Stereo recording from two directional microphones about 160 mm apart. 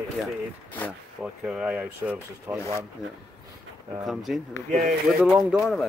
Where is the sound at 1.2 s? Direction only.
5° right (ahead or behind).